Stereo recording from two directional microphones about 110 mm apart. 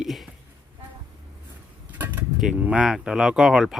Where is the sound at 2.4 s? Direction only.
10° right (ahead or behind).